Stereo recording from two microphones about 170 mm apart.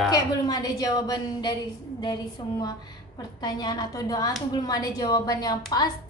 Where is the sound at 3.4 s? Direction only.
25° left (ahead or behind).